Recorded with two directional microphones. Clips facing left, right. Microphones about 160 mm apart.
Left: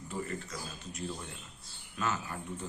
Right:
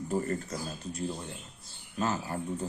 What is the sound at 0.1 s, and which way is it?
Speech, 45° right (ahead or behind).